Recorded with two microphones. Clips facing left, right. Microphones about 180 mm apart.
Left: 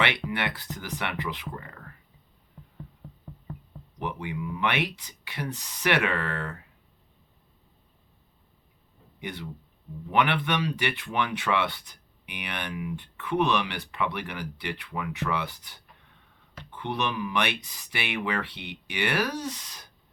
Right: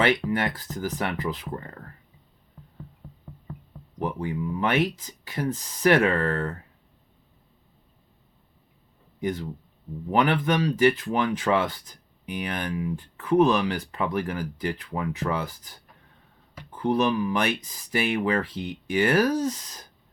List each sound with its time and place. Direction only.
0.0 s speech: 40° right (ahead or behind)
3.9 s speech: 40° right (ahead or behind)
9.2 s speech: 40° right (ahead or behind)